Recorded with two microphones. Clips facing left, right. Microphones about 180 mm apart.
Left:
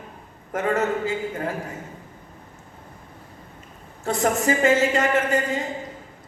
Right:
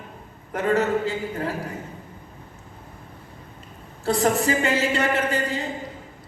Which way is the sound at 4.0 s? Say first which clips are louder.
Right 1 dB; 35° right (ahead or behind).